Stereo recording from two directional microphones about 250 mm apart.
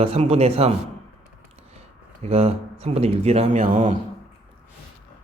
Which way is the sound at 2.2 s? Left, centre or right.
Right.